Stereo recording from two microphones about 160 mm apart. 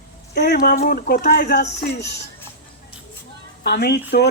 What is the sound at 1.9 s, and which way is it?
Speech, 90° left.